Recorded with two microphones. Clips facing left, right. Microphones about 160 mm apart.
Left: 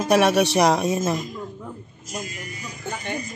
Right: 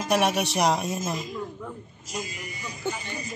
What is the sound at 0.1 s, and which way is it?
Speech, 85° left.